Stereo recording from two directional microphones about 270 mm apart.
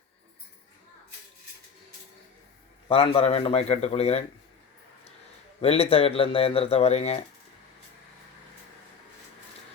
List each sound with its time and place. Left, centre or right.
2.9 s speech: left
5.5 s speech: left